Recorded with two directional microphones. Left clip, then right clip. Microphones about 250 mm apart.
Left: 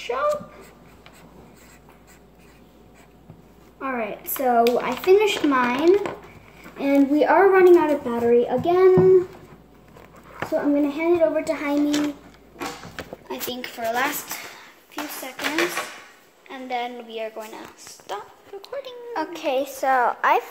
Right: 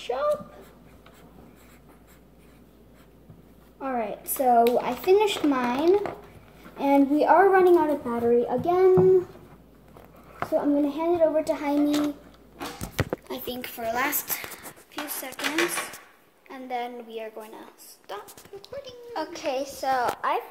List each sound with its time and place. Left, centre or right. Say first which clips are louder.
3.8 s a woman's voice: left 2 dB; centre
10.4 s a woman's voice: left 2 dB; centre
13.3 s a woman's voice: left 3 dB; centre
15.4 s a woman's voice: left 3 dB; centre
18.1 s speech: left 5 dB; centre
19.1 s a woman's voice: left 5 dB; centre